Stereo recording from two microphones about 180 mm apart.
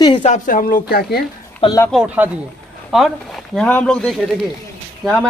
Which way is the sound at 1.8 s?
5° right (ahead or behind).